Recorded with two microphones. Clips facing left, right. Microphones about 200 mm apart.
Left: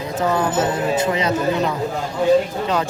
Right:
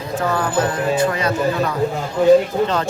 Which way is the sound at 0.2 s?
20° left (ahead or behind).